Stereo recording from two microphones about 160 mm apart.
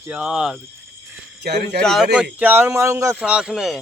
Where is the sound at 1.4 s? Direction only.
90° right.